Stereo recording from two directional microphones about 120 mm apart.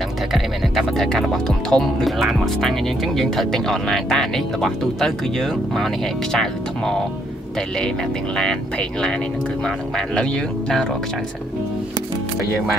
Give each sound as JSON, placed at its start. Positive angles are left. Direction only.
{"t": 0.3, "sound": "music", "side_deg": 0}
{"t": 8.4, "sound": "music", "side_deg": 5}